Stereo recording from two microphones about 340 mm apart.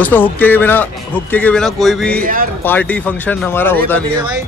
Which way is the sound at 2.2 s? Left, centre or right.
Right.